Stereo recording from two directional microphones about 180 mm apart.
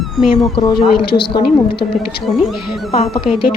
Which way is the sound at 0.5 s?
30° left (ahead or behind).